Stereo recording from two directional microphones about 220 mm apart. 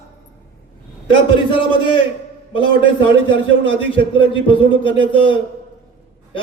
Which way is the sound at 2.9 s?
20° left (ahead or behind).